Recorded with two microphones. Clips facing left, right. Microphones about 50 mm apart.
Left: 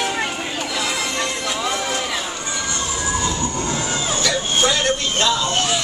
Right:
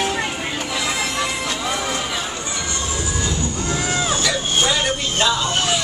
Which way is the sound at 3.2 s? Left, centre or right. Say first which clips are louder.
Left 1 dB; left.